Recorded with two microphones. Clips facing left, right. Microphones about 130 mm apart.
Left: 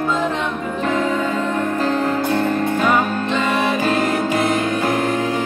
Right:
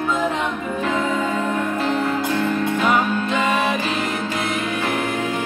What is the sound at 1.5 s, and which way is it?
Music, 40° left (ahead or behind).